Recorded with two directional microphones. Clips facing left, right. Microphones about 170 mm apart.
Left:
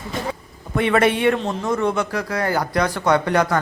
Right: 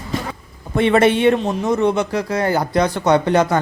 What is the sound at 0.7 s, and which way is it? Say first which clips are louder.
A man's voice: right 3 dB; 25° right (ahead or behind).